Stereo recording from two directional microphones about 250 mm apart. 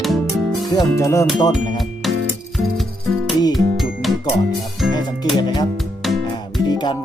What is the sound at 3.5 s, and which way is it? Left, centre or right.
Music, centre.